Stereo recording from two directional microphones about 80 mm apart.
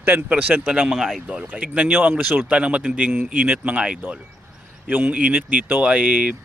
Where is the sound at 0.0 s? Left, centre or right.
Right.